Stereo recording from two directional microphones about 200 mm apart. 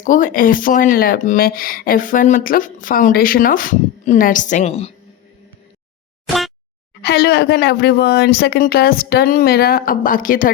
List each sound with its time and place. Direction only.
0.0 s speech: 40° left (ahead or behind)
6.2 s a sound: centre (ahead or behind)
7.0 s speech: 50° left (ahead or behind)